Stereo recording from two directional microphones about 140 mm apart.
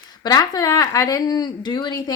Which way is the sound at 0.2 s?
30° left (ahead or behind).